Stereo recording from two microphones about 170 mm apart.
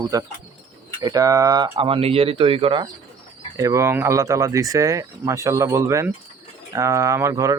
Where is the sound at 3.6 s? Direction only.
20° right (ahead or behind).